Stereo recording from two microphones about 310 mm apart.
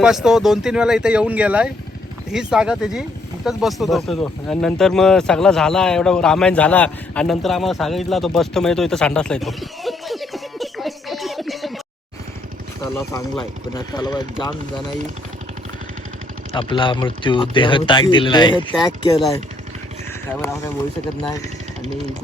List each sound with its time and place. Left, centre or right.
0.0 s speech: centre
12.8 s speech: centre
16.6 s speech: centre
20.3 s speech: centre